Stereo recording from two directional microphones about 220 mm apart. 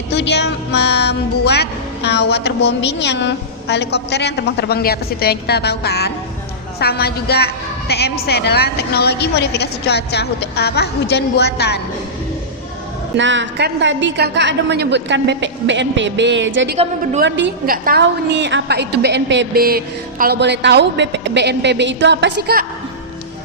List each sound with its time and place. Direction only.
0.1 s a woman's voice: 50° left (ahead or behind)
13.1 s a woman's voice: 55° right (ahead or behind)
16.7 s a woman's voice: 25° right (ahead or behind)
17.2 s a woman's voice: 55° right (ahead or behind)